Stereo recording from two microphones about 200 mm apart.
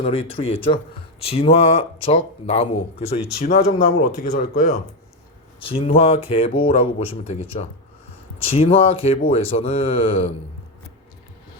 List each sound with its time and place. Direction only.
0.0 s speech: 30° left (ahead or behind)
5.6 s speech: 30° left (ahead or behind)